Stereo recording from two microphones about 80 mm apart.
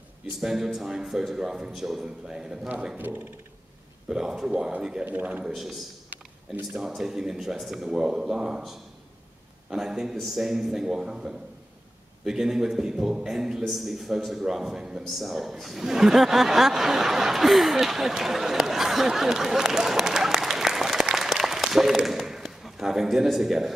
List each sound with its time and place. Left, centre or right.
0.4 s a man's voice: centre
3.0 s a man's voice: right
4.1 s speech: centre
5.0 s a man's voice: right
5.5 s a man's voice: centre
6.0 s a sound: centre
6.8 s a man's voice: centre